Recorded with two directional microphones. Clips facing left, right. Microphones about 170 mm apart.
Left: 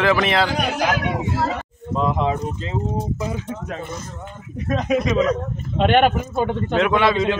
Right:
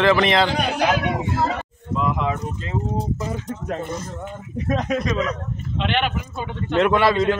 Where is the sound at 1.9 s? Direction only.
30° left (ahead or behind).